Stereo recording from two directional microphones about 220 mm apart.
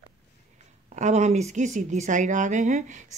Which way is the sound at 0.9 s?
30° right (ahead or behind).